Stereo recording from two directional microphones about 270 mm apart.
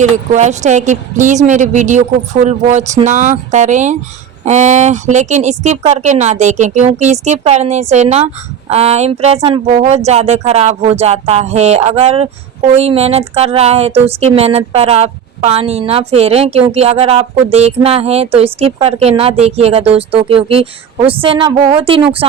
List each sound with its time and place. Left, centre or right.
0.0 s speech: right